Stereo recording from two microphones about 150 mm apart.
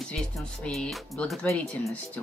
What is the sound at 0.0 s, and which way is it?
Speech, 5° left (ahead or behind).